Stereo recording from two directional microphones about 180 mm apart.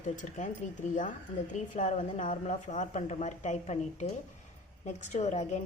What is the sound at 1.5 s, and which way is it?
A woman's voice, 40° left (ahead or behind).